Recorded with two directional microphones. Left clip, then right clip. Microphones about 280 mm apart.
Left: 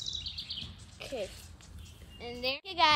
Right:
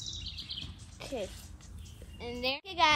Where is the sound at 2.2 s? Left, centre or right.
Centre.